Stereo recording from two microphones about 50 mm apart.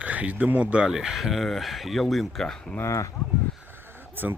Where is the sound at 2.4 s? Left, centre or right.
Centre.